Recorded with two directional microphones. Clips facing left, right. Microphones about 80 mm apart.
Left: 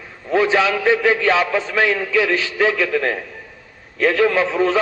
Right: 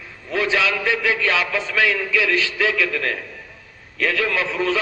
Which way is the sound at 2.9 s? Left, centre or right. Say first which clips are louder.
Left 5 dB; left.